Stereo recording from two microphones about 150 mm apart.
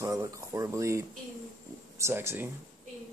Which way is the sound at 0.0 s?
20° right (ahead or behind).